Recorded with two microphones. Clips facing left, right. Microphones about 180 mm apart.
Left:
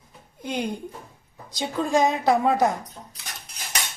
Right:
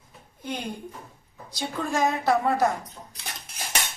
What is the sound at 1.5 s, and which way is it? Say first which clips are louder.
A woman's voice: left 4 dB; 15° left (ahead or behind).